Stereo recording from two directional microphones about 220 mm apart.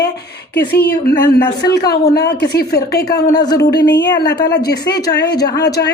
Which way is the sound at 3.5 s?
50° left (ahead or behind).